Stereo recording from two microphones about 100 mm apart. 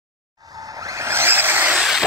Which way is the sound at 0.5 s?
35° right (ahead or behind).